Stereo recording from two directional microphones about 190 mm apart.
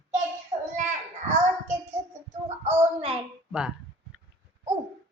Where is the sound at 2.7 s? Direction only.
35° right (ahead or behind).